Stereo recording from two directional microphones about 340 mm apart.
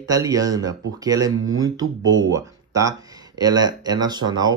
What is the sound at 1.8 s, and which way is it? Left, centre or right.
Speech, right.